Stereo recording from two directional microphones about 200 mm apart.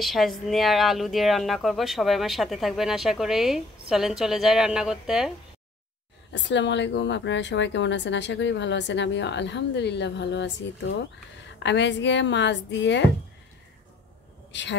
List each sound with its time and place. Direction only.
0.0 s speech: centre (ahead or behind)
6.3 s a woman's voice: 65° left (ahead or behind)
14.5 s a woman's voice: 65° left (ahead or behind)